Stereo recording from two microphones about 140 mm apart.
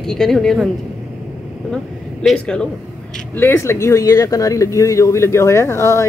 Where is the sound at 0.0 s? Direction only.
5° left (ahead or behind).